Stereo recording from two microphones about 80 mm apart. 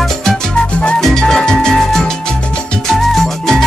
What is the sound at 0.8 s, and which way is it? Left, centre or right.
Music, centre.